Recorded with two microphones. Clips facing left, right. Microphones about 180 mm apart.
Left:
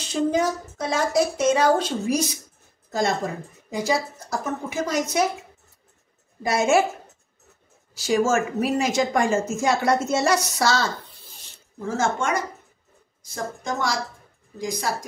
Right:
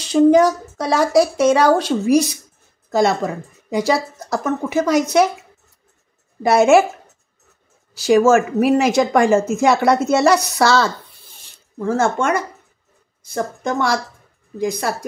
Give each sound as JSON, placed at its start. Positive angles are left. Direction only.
{"t": 0.1, "sound": "a woman's voice", "side_deg": -75}
{"t": 6.4, "sound": "a woman's voice", "side_deg": -70}
{"t": 7.9, "sound": "a woman's voice", "side_deg": -65}